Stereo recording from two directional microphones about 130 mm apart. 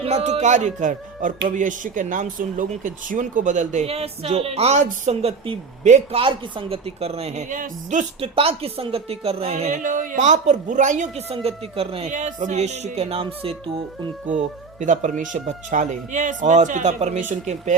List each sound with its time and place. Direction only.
0.0 s a woman's voice: 55° right (ahead or behind)
6.1 s a woman's voice: 45° right (ahead or behind)
7.5 s speech: 80° right
8.2 s a woman's voice: 50° right (ahead or behind); by 11.1 s 70° right (ahead or behind)
11.3 s a woman's voice: 50° right (ahead or behind)
12.1 s a woman's voice: 70° right (ahead or behind); by 13.6 s 45° right (ahead or behind)
14.8 s speech: 70° right (ahead or behind)